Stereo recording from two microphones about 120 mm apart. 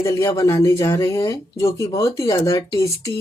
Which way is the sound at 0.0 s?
25° left (ahead or behind).